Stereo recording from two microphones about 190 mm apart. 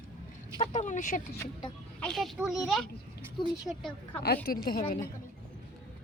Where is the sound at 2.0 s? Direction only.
Centre (ahead or behind).